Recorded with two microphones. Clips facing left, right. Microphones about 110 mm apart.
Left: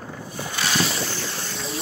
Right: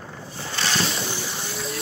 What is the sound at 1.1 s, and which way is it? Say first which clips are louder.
Boat: even; 15° right (ahead or behind).